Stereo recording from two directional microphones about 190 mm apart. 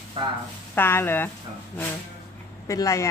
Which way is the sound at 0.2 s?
25° right (ahead or behind).